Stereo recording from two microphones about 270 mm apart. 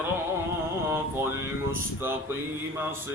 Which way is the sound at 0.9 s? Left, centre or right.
Centre.